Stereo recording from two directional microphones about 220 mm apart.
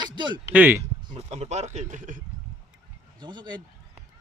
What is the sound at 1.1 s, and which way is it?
Speech, 30° right (ahead or behind).